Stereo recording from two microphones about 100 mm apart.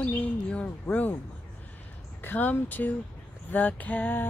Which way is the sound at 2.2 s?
20° left (ahead or behind).